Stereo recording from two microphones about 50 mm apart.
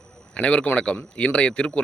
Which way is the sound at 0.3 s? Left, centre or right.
Left.